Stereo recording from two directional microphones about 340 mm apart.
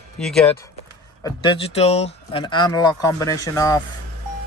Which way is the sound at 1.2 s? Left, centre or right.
Centre.